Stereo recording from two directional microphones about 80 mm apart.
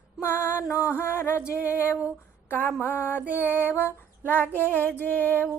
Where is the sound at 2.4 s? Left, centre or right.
Left.